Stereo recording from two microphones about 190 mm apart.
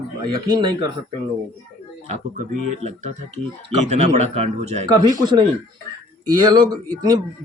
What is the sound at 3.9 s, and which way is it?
Speech, 35° right (ahead or behind).